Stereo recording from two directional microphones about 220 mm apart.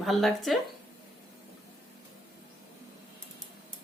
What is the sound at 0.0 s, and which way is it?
Speech, centre (ahead or behind).